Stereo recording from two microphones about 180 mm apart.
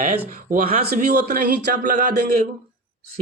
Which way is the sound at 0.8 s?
65° right (ahead or behind).